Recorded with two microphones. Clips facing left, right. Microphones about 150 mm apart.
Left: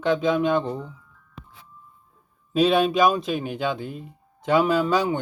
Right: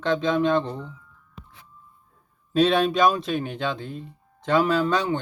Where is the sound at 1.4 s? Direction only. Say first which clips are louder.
Left 2 dB; 90° left.